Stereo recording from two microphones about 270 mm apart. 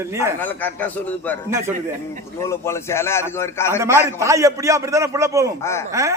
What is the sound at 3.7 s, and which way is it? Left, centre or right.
A man's voice, centre.